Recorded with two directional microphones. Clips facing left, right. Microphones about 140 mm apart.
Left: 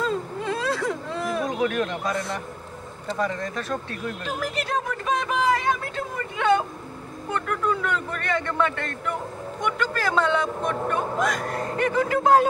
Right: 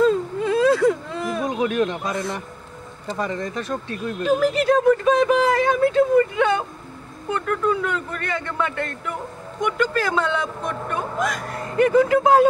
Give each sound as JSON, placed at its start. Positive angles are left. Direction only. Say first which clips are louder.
{"t": 0.0, "sound": "whimper", "louder": "right 8 dB", "side_deg": 0}
{"t": 1.6, "sound": "a sound", "louder": "right 3 dB", "side_deg": -20}
{"t": 3.2, "sound": "speech", "louder": "right 1 dB", "side_deg": -20}
{"t": 4.6, "sound": "speech", "louder": "right 12 dB", "side_deg": 0}